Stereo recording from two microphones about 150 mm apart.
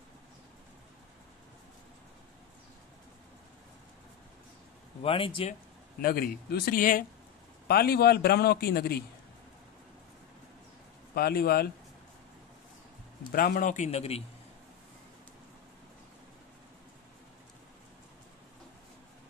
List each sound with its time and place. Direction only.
5.0 s speech: 35° left (ahead or behind)
5.9 s a man's voice: 80° left; by 7.1 s 65° left (ahead or behind)
7.6 s a man's voice: 90° left
11.1 s a man's voice: 90° left
13.3 s a man's voice: 80° left; by 14.2 s 40° left (ahead or behind)